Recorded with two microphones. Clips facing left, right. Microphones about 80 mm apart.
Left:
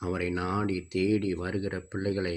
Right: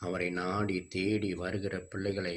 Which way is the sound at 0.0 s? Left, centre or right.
Left.